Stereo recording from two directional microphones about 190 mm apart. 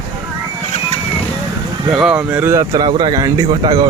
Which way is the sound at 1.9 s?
5° right (ahead or behind).